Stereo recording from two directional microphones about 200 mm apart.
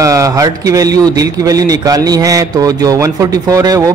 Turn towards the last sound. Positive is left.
turn(degrees=-15)  # may be behind; listen again after turning